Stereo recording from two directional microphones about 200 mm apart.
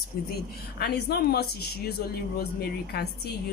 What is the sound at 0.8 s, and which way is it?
A woman's voice, 55° left (ahead or behind).